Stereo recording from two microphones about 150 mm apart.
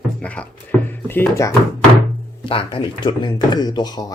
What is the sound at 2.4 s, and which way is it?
Speech, 40° left (ahead or behind).